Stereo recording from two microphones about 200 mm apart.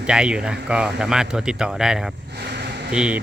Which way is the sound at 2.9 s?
5° right (ahead or behind).